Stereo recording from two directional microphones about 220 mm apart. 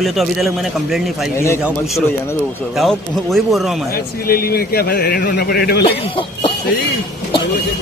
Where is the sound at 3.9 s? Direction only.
40° left (ahead or behind).